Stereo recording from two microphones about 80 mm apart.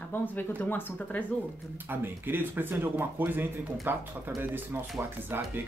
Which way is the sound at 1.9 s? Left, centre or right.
Right.